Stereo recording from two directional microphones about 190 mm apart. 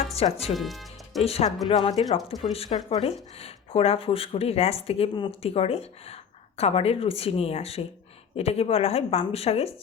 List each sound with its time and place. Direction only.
0.2 s speech: 30° left (ahead or behind)
0.5 s music: centre (ahead or behind)
1.2 s speech: 30° left (ahead or behind)